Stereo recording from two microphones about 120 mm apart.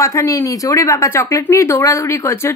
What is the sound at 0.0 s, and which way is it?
Speech, 25° left (ahead or behind).